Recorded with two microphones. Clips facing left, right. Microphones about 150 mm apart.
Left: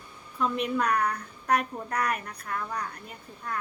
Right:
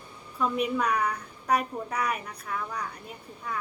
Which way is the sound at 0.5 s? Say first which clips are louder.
Even; 5° right (ahead or behind).